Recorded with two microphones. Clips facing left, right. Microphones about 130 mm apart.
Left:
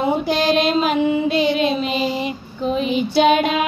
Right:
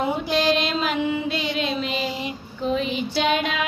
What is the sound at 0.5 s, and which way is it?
Child singing, 50° left (ahead or behind).